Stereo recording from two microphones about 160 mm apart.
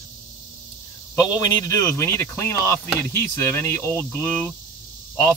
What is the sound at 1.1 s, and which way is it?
Speech, 25° left (ahead or behind).